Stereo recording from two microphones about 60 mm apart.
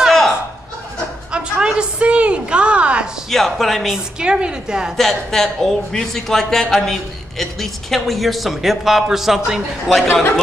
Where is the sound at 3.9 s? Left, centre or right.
Centre.